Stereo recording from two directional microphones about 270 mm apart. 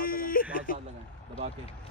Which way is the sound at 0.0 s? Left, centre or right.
Left.